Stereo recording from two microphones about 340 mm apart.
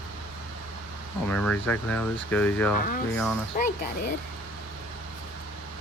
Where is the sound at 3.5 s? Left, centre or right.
Left.